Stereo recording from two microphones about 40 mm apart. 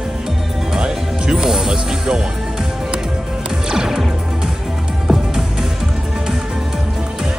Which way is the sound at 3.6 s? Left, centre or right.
Centre.